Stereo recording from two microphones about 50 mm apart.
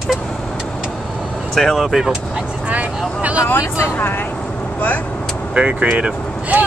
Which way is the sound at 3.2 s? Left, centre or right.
Right.